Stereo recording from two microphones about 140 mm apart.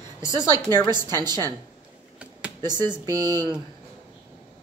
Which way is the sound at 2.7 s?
30° right (ahead or behind).